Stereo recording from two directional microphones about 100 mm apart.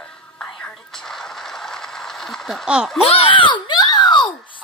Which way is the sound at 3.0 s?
70° left (ahead or behind).